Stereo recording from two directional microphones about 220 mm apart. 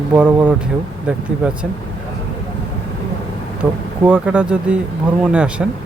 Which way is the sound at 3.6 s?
5° right (ahead or behind).